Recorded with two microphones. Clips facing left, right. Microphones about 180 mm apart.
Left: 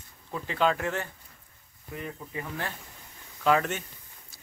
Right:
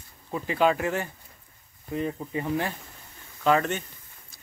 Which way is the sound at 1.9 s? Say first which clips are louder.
Right 8 dB; 25° right (ahead or behind).